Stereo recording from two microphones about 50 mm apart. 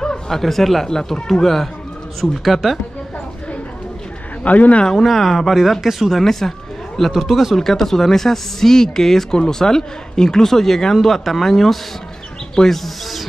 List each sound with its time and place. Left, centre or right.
0.0 s speech: centre
4.4 s speech: left
4.8 s speech: centre